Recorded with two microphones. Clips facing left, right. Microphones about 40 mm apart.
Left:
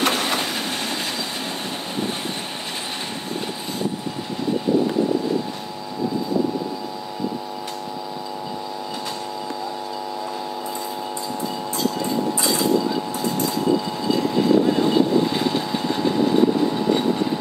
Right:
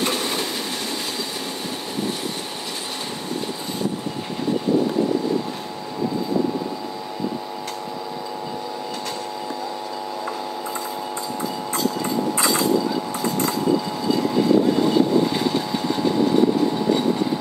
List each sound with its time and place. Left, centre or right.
0.0 s train: left
14.0 s vehicle: centre